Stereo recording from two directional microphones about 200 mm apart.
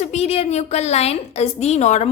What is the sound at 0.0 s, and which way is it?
A woman's voice, 35° left (ahead or behind).